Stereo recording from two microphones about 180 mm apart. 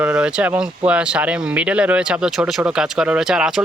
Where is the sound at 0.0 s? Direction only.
10° right (ahead or behind).